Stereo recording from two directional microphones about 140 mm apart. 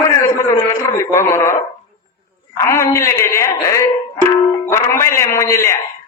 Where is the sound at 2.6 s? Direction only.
20° left (ahead or behind).